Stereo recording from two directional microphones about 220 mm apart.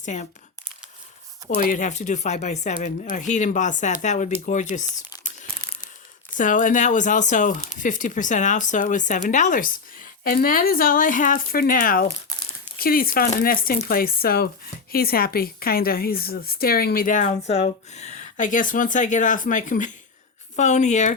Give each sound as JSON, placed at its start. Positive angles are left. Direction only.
{"t": 0.0, "sound": "speech", "side_deg": 35}
{"t": 1.5, "sound": "speech", "side_deg": 35}
{"t": 6.3, "sound": "speech", "side_deg": 35}
{"t": 12.3, "sound": "crumpling", "side_deg": 15}
{"t": 12.8, "sound": "speech", "side_deg": 40}